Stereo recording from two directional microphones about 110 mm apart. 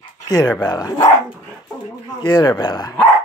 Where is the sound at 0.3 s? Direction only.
35° left (ahead or behind).